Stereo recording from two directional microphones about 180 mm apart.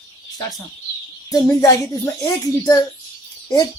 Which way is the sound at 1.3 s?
20° left (ahead or behind).